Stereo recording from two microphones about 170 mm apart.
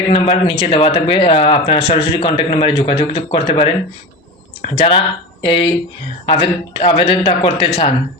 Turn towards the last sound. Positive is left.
turn(degrees=30)  # may be behind; listen again after turning